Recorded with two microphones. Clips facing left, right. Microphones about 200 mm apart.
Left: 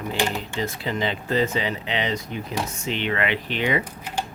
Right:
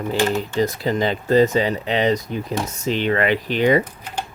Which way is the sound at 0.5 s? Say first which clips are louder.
Right 7 dB; 40° right (ahead or behind).